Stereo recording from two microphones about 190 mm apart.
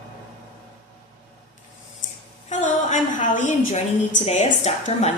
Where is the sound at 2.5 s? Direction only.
40° left (ahead or behind).